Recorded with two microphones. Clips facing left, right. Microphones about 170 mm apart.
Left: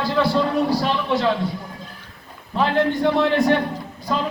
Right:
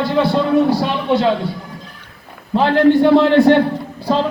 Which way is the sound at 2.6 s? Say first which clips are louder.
Right 7 dB; 65° right (ahead or behind).